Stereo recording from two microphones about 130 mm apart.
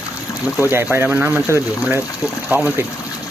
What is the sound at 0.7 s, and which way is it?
Speech, 20° right (ahead or behind).